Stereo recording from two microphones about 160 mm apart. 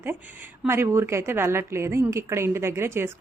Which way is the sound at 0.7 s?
15° right (ahead or behind).